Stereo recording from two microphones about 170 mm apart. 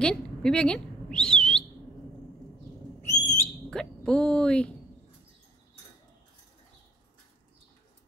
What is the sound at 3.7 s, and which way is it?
Speech, 5° left (ahead or behind).